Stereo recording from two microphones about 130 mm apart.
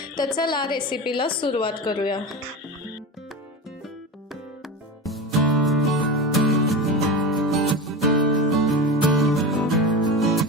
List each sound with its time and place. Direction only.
0.3 s a woman's voice: 35° left (ahead or behind)
5.0 s music: centre (ahead or behind)